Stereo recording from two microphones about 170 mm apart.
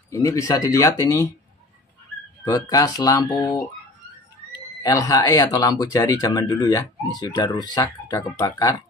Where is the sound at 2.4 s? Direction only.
20° left (ahead or behind).